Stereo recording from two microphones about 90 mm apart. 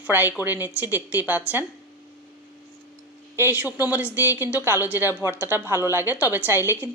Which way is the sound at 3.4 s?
20° right (ahead or behind).